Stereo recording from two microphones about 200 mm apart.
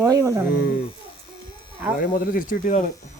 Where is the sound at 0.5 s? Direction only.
45° left (ahead or behind).